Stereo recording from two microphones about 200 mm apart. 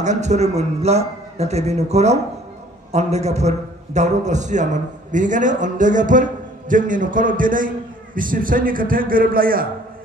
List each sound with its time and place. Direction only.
0.0 s a man's voice: 35° right (ahead or behind)